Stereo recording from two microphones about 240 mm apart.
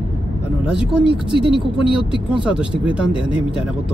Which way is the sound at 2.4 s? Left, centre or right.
Centre.